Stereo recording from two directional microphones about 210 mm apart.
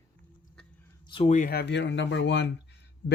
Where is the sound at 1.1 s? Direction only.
30° left (ahead or behind); by 2.5 s 60° left (ahead or behind).